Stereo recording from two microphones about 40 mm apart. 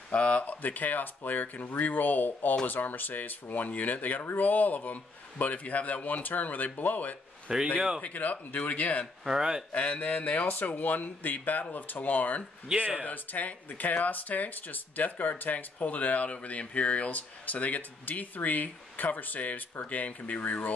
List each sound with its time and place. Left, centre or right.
0.1 s speech: left
0.6 s speech: left
7.5 s speech: right
8.0 s speech: left
9.2 s speech: centre
9.9 s speech: left
12.7 s speech: right
13.0 s speech: left